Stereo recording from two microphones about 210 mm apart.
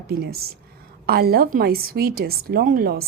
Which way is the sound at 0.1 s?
45° right (ahead or behind).